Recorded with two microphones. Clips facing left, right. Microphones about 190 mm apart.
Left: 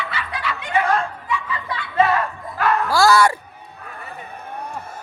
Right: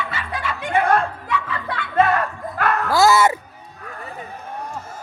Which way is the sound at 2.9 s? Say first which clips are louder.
Right 1 dB; 20° right (ahead or behind).